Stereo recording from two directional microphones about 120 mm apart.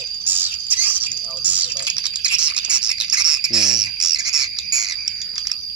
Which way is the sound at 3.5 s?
5° right (ahead or behind).